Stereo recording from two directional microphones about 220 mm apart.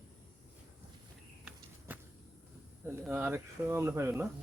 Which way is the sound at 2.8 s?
10° right (ahead or behind).